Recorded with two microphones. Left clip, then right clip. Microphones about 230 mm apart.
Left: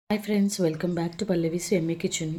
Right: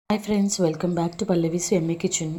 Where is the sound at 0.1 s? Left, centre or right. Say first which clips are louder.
Right 3 dB; centre.